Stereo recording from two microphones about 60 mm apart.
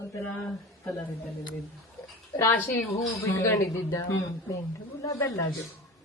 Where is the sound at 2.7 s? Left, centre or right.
Left.